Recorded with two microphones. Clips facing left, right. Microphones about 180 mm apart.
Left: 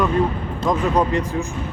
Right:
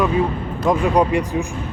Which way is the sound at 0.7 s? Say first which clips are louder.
Right 3 dB; 15° right (ahead or behind).